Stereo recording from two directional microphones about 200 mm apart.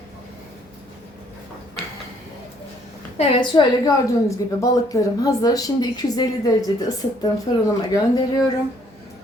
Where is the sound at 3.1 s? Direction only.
25° left (ahead or behind).